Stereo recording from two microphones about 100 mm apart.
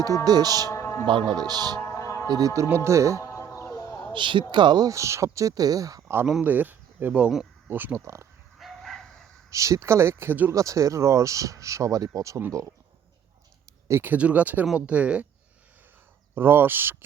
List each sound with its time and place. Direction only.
0.3 s speech: 40° right (ahead or behind)
0.7 s music: 30° left (ahead or behind)
1.0 s speech: 50° right (ahead or behind)
1.8 s music: 30° left (ahead or behind)
2.6 s speech: 25° right (ahead or behind)
3.2 s music: 30° left (ahead or behind)
4.1 s speech: 55° right (ahead or behind); by 6.0 s 35° right (ahead or behind)
6.0 s speech: 25° right (ahead or behind)
7.7 s speech: 20° right (ahead or behind)
8.5 s bow-wow: centre (ahead or behind)
9.5 s speech: 30° right (ahead or behind)
10.5 s speech: 30° right (ahead or behind)
14.0 s speech: 15° right (ahead or behind)
16.3 s speech: 20° right (ahead or behind)